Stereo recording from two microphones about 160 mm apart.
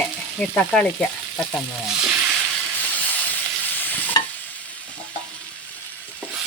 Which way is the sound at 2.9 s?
10° left (ahead or behind).